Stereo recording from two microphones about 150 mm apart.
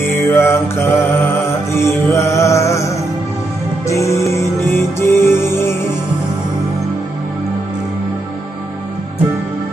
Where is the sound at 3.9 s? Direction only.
20° left (ahead or behind).